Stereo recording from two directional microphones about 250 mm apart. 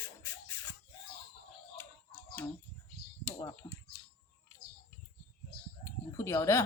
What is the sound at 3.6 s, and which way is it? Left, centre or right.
Speech, centre.